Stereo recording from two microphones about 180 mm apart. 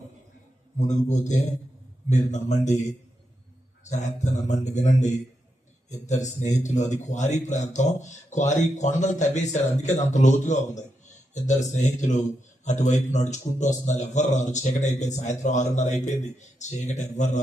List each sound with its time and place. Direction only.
0.8 s a man's voice: 40° left (ahead or behind)